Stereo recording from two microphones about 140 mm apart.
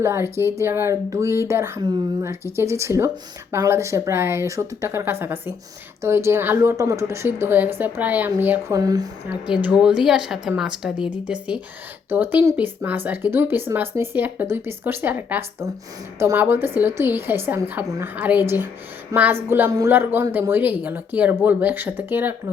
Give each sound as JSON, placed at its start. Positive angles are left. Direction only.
{"t": 0.0, "sound": "speech", "side_deg": -20}
{"t": 8.7, "sound": "speech", "side_deg": -25}
{"t": 9.3, "sound": "a woman's voice", "side_deg": -10}